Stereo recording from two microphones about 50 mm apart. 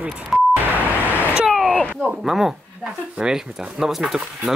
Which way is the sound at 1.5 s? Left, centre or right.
Centre.